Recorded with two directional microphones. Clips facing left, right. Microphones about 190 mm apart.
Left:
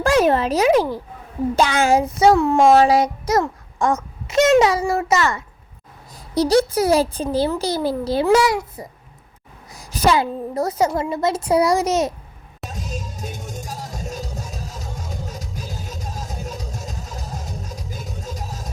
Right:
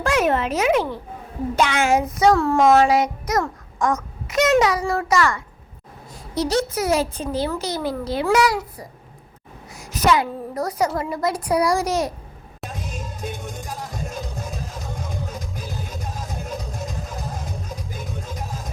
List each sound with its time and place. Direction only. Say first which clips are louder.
0.0 s speech: left 4 dB; 30° left (ahead or behind)
2.3 s a sound: left 2 dB; 15° left (ahead or behind)
2.6 s a child's voice: left 2 dB; 30° left (ahead or behind)
6.3 s speech: left 5 dB; 35° left (ahead or behind)
9.7 s a woman's voice: left 1 dB; 30° left (ahead or behind)
12.7 s music: left 2 dB; 55° right (ahead or behind)